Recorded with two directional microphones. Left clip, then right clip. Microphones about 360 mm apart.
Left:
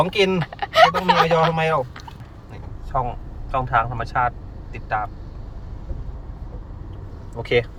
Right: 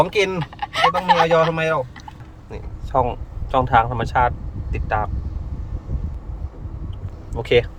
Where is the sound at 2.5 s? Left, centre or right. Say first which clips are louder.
Right 4 dB; centre.